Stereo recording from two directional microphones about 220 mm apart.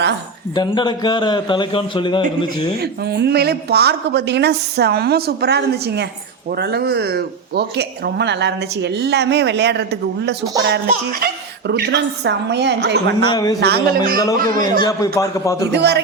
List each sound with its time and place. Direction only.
0.5 s a man's voice: 20° left (ahead or behind)
2.7 s speech: 45° right (ahead or behind)
13.2 s a man's voice: 20° left (ahead or behind)
13.6 s a man's voice: 45° right (ahead or behind)
14.8 s a man's voice: 15° left (ahead or behind)
15.7 s speech: 50° right (ahead or behind)